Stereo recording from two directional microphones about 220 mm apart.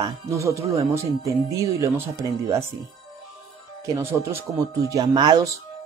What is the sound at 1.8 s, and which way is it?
Speech, 15° right (ahead or behind).